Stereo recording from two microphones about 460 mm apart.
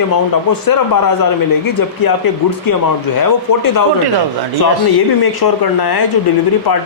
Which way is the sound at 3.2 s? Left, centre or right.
Left.